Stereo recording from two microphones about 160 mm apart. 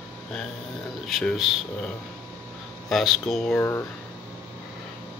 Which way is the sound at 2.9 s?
Centre (ahead or behind).